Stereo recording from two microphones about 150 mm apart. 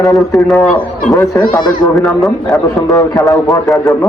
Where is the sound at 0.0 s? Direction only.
20° left (ahead or behind).